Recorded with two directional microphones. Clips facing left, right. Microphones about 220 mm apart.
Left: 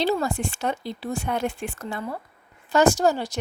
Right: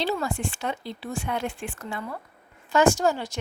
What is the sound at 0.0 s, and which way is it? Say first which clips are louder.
A woman's voice: left 4 dB; 40° left (ahead or behind).